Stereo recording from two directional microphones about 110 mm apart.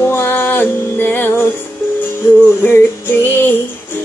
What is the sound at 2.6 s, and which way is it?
Music, 20° left (ahead or behind).